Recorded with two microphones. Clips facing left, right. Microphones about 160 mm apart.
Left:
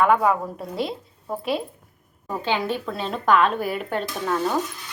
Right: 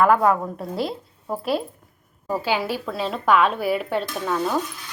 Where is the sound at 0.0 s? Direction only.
Centre (ahead or behind).